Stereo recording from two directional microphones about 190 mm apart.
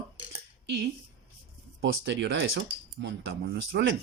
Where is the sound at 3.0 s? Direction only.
60° right (ahead or behind).